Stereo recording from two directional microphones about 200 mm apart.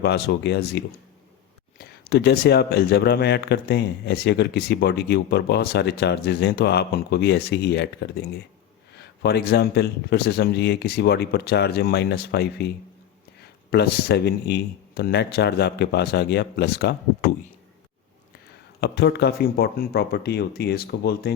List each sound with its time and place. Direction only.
0.0 s speech: 55° left (ahead or behind)
18.8 s speech: 55° left (ahead or behind)